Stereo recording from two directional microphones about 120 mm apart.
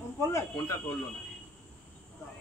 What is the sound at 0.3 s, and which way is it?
Speech, 25° left (ahead or behind).